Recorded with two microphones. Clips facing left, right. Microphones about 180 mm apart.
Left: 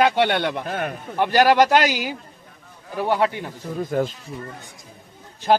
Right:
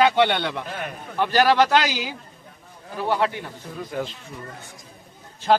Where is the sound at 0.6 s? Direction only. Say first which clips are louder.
Left 5 dB; 45° left (ahead or behind).